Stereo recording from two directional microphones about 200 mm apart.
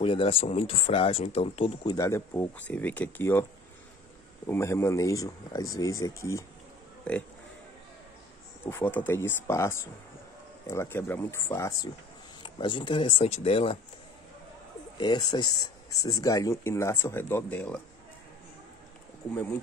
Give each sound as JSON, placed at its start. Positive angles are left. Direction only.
{"t": 0.0, "sound": "speech", "side_deg": 25}
{"t": 2.0, "sound": "speech", "side_deg": 15}
{"t": 4.5, "sound": "speech", "side_deg": 10}
{"t": 8.6, "sound": "speech", "side_deg": 10}
{"t": 15.0, "sound": "speech", "side_deg": 20}